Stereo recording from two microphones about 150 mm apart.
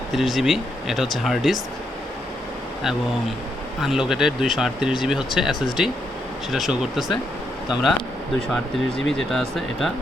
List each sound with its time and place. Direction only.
0.1 s speech: centre (ahead or behind)
3.8 s speech: 5° right (ahead or behind)
9.0 s speech: centre (ahead or behind)